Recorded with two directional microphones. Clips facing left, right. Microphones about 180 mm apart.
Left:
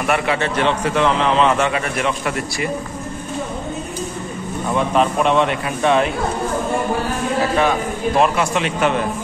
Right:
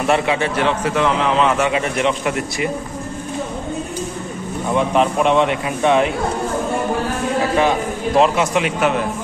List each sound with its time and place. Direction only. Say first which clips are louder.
0.0 s a man's voice: right 2 dB; 25° right (ahead or behind)
0.4 s a man's voice: even; 5° right (ahead or behind)
1.7 s a man's voice: right 2 dB; 20° right (ahead or behind)
4.7 s a man's voice: right 1 dB; 15° right (ahead or behind)
8.2 s a man's voice: right 3 dB; 15° right (ahead or behind)